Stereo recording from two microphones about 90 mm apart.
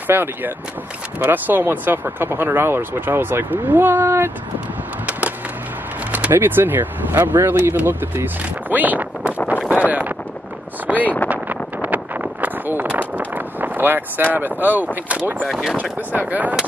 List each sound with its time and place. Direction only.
0.0 s speech: 20° right (ahead or behind)
6.1 s speech: 20° right (ahead or behind)
9.8 s a sound: 20° right (ahead or behind)
10.9 s speech: 15° right (ahead or behind)
11.2 s a sound: 15° right (ahead or behind)
15.0 s speech: 15° right (ahead or behind)
15.4 s speech: centre (ahead or behind)
15.7 s speech: 15° right (ahead or behind)